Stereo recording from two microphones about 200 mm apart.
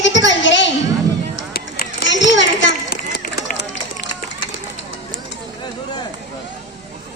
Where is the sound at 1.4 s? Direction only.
50° left (ahead or behind).